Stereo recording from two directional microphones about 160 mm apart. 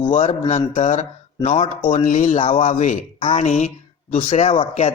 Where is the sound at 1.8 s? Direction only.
55° left (ahead or behind); by 4.9 s 40° left (ahead or behind).